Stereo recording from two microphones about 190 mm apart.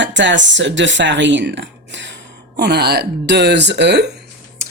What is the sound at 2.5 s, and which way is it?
A woman's voice, 60° right (ahead or behind).